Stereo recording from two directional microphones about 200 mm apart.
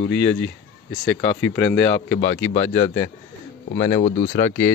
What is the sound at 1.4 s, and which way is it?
Speech, 5° left (ahead or behind).